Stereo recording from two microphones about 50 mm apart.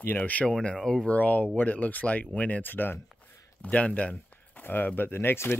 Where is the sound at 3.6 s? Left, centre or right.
Left.